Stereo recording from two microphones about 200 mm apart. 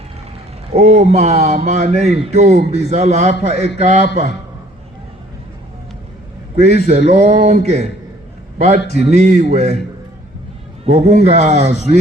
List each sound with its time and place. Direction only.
0.7 s speech: 30° right (ahead or behind)
6.6 s speech: 35° right (ahead or behind)
9.0 s speech: 35° right (ahead or behind)
10.8 s speech: 35° right (ahead or behind)